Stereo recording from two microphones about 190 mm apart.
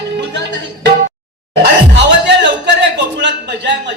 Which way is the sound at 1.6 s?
70° right (ahead or behind).